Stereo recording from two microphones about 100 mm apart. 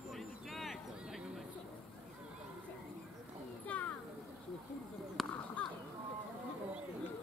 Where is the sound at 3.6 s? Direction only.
15° left (ahead or behind).